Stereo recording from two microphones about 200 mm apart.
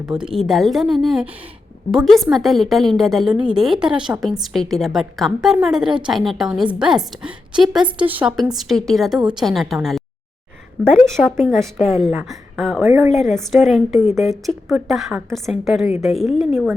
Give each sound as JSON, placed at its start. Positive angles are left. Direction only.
{"t": 0.0, "sound": "a woman's voice", "side_deg": -5}
{"t": 12.8, "sound": "a woman's voice", "side_deg": -15}
{"t": 13.1, "sound": "a woman's voice", "side_deg": 0}